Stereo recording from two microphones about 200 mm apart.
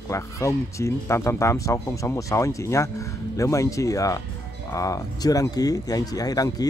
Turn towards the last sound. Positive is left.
turn(degrees=20)  # may be behind; listen again after turning